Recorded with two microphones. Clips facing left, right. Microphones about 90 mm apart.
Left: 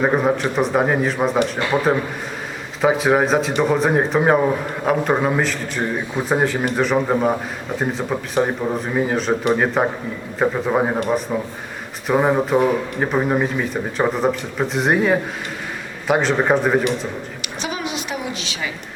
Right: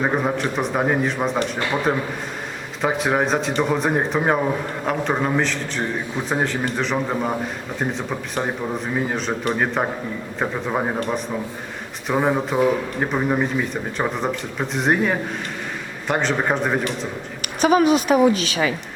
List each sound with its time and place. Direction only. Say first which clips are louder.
0.0 s a man's voice: left 3 dB; 5° left (ahead or behind)
17.6 s a woman's voice: right 11 dB; 45° right (ahead or behind)